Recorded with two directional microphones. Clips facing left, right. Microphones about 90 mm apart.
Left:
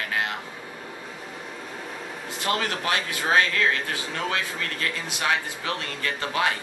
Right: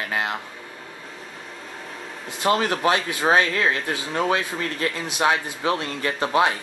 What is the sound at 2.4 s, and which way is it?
Speech, 25° right (ahead or behind).